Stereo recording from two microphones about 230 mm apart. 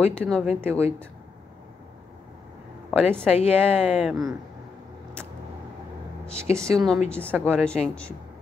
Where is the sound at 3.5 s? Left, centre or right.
Centre.